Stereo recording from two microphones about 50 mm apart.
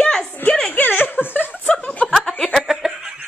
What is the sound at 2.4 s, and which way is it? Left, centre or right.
Snicker, centre.